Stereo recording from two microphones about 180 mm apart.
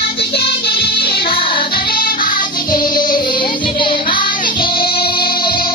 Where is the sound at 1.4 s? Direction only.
25° left (ahead or behind).